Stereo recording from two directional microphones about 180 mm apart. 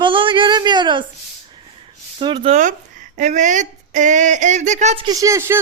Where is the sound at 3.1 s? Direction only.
45° right (ahead or behind).